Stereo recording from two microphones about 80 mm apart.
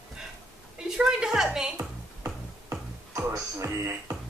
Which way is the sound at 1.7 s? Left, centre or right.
Right.